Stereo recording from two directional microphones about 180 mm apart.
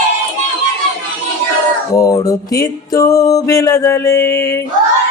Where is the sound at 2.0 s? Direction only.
20° left (ahead or behind).